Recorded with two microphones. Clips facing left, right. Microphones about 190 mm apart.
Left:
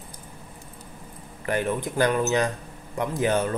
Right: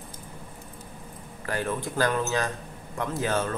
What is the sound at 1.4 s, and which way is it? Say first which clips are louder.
A man's voice: left 4 dB; 20° left (ahead or behind).